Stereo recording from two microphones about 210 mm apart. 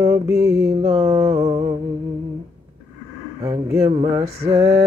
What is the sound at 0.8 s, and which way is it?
Music, 30° right (ahead or behind).